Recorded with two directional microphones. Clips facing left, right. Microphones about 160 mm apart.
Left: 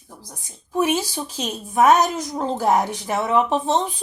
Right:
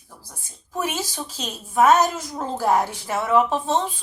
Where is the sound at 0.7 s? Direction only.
15° left (ahead or behind).